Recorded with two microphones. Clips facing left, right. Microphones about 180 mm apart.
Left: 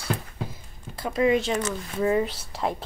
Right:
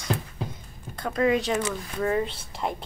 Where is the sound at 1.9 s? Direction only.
15° left (ahead or behind).